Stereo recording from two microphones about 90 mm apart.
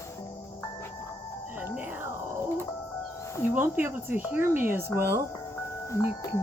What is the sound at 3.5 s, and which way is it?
Speech, 25° right (ahead or behind).